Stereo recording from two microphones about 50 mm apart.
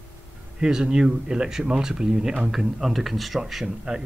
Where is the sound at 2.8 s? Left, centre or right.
Centre.